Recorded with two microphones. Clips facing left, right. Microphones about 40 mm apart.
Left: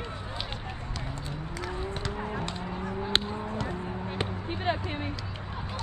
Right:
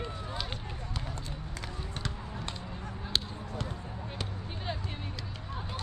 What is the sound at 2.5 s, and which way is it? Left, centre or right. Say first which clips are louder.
Honk: left 7 dB; left.